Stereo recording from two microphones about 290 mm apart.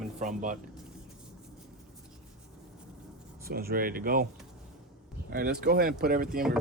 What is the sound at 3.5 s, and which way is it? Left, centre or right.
Speech, right.